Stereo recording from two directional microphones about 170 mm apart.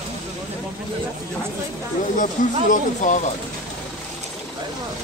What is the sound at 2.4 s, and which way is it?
Speech, 50° left (ahead or behind).